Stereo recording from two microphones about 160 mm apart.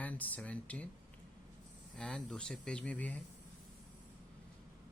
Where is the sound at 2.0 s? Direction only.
5° left (ahead or behind).